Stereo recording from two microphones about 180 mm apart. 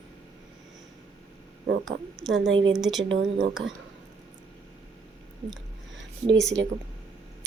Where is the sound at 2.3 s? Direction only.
90° right.